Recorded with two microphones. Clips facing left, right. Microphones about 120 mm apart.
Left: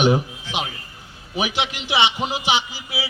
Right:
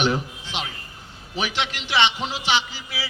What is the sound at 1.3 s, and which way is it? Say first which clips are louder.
A man's voice: left 3 dB; 10° left (ahead or behind).